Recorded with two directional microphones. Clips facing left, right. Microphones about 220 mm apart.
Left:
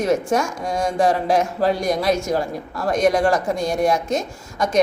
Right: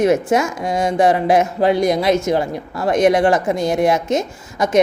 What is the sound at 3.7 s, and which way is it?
Speech, 20° right (ahead or behind).